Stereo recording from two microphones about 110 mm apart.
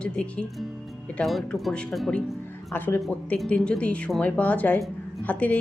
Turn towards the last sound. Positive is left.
turn(degrees=15)  # may be behind; listen again after turning